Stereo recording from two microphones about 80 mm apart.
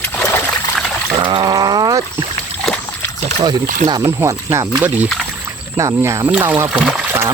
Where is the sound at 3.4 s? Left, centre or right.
Right.